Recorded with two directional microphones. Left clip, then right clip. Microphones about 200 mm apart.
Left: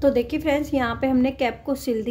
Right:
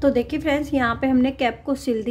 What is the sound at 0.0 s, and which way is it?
A woman's voice, 5° right (ahead or behind).